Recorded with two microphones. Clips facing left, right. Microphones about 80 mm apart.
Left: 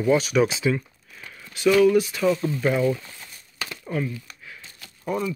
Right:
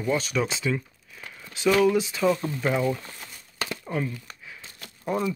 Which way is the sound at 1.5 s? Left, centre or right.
Right.